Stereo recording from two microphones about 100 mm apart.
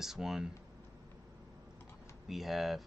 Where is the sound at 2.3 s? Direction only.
Centre (ahead or behind).